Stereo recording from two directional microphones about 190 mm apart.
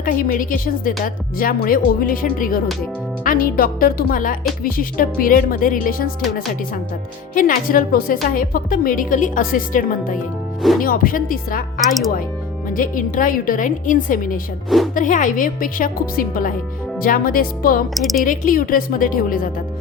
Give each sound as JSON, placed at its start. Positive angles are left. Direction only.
{"t": 0.0, "sound": "speech", "side_deg": 45}
{"t": 12.7, "sound": "speech", "side_deg": 45}
{"t": 17.9, "sound": "speech", "side_deg": 0}
{"t": 18.2, "sound": "speech", "side_deg": 45}